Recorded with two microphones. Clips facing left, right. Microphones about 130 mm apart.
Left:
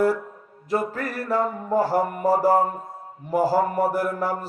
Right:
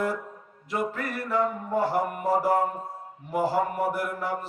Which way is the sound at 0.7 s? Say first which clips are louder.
Left 4 dB; 40° left (ahead or behind).